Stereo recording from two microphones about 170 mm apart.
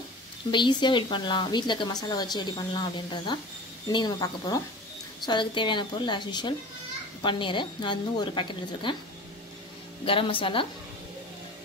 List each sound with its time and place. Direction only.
0.5 s speech: 25° left (ahead or behind)
10.0 s speech: 30° left (ahead or behind)